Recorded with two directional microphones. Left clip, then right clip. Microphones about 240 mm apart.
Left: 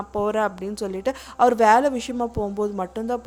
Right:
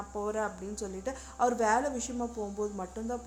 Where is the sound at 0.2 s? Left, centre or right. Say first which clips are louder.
Left 11 dB; left.